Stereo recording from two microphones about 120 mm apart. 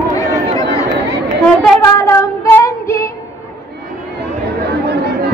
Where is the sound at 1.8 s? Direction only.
25° left (ahead or behind).